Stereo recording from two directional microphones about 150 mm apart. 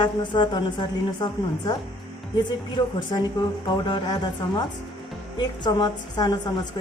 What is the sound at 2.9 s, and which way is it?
A woman's voice, 30° left (ahead or behind).